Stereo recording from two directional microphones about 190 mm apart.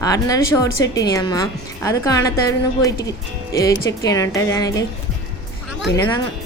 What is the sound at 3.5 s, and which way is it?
A woman's voice, 15° left (ahead or behind).